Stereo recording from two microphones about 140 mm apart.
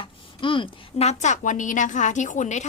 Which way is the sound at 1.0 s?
60° left (ahead or behind).